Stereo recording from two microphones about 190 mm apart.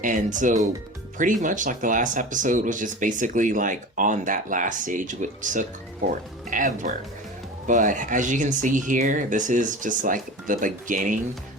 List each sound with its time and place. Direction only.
0.0 s speech: 40° right (ahead or behind)